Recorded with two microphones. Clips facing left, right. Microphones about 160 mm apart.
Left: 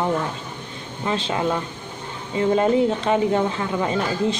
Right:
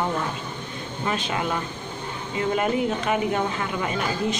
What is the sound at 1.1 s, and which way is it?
Speech, 25° left (ahead or behind).